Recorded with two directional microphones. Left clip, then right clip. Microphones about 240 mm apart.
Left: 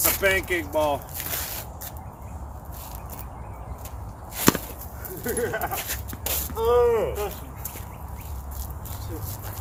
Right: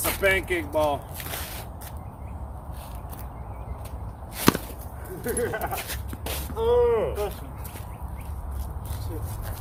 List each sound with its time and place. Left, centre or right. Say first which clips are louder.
0.0 s speech: left 1 dB; centre
4.4 s whip: left 1 dB; centre
5.2 s speech: left 1 dB; centre
5.7 s dog: left 1 dB; centre
6.2 s speech: left 1 dB; centre